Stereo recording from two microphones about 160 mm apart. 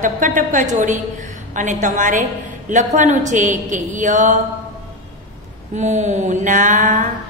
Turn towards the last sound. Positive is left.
turn(degrees=-50)  # may be behind; listen again after turning